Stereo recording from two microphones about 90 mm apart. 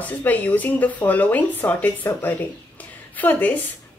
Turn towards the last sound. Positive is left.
turn(degrees=20)  # may be behind; listen again after turning